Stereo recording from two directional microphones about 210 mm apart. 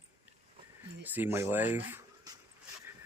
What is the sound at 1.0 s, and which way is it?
Speech, 10° right (ahead or behind).